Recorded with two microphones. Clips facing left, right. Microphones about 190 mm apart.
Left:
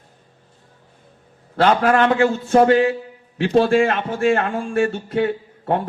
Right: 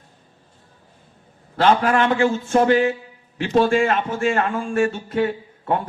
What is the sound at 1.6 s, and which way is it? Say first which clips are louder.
A man's voice: left 2 dB; 45° left (ahead or behind).